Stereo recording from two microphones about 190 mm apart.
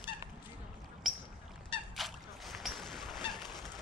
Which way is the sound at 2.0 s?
Centre (ahead or behind).